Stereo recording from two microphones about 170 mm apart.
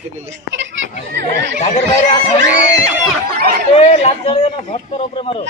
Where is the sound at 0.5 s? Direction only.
90° right.